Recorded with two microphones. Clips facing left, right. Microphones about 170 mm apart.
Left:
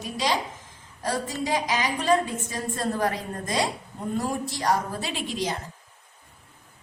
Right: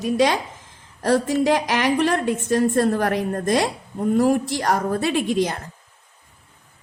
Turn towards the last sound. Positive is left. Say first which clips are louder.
# right 9 dB
turn(degrees=-55)  # may be behind; listen again after turning